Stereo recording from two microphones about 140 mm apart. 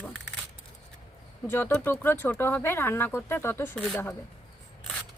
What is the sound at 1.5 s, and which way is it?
Speech, 15° left (ahead or behind).